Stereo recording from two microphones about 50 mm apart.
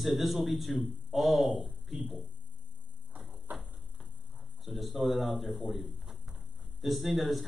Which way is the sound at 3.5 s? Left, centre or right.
Right.